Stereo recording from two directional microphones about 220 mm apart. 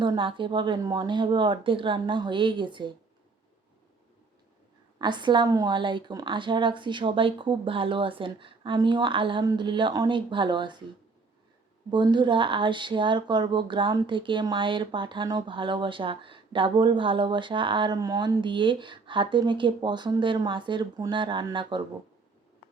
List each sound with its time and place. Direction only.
0.0 s speech: 20° right (ahead or behind)
4.9 s speech: 20° right (ahead or behind)
11.9 s speech: 20° right (ahead or behind)